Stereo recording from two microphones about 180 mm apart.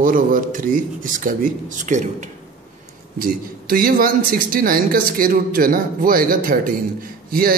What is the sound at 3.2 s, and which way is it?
A man's voice, 55° right (ahead or behind).